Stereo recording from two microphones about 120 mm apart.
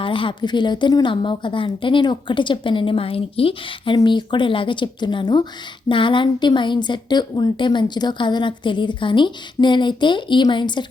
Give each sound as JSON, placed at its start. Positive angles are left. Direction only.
{"t": 0.0, "sound": "a woman's voice", "side_deg": 45}